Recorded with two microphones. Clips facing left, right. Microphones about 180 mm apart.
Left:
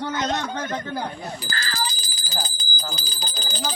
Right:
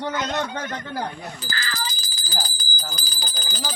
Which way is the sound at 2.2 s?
25° left (ahead or behind).